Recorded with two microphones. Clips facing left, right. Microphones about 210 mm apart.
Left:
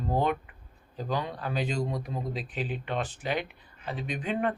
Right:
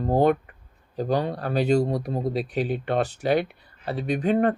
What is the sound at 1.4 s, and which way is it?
Speech, 65° right (ahead or behind).